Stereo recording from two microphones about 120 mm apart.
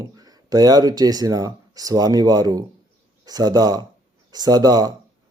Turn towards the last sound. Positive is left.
turn(degrees=-35)  # may be behind; listen again after turning